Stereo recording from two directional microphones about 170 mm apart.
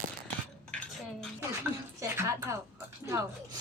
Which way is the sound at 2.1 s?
15° right (ahead or behind).